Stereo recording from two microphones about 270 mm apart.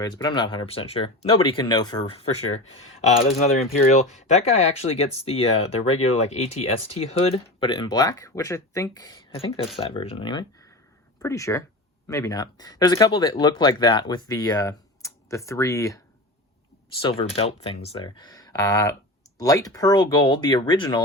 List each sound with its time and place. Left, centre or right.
0.0 s speech: centre
3.4 s speech: left
17.0 s speech: centre